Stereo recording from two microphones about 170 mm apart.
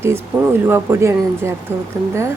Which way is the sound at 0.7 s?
15° right (ahead or behind).